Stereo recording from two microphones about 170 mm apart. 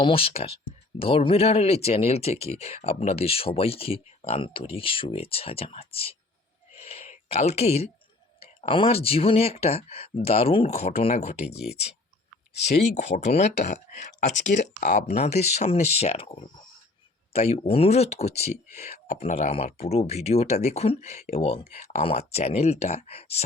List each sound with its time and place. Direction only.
0.0 s speech: 35° left (ahead or behind)
6.7 s a sound: 35° left (ahead or behind)
8.4 s speech: 30° left (ahead or behind)
12.6 s speech: 45° left (ahead or behind)